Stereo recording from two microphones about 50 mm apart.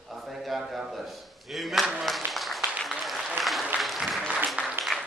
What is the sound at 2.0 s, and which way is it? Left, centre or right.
Applause, centre.